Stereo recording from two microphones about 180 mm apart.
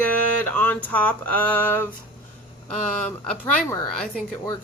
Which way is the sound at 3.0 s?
5° left (ahead or behind).